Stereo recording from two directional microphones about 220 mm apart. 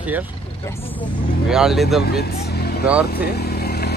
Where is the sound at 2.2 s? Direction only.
45° left (ahead or behind).